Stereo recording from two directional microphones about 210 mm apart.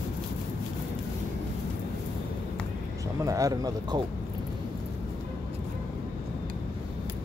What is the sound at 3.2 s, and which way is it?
Speech, 15° right (ahead or behind).